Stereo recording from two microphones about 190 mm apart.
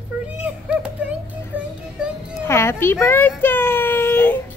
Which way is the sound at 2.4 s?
15° left (ahead or behind).